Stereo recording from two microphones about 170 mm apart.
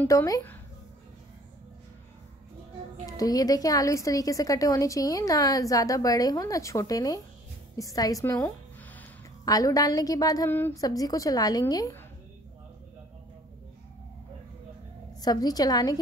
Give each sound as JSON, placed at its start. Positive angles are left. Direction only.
{"t": 0.0, "sound": "speech", "side_deg": 20}
{"t": 3.1, "sound": "a woman's voice", "side_deg": 20}
{"t": 15.2, "sound": "a woman's voice", "side_deg": 20}